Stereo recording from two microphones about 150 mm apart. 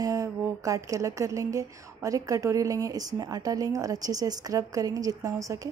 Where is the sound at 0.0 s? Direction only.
20° right (ahead or behind).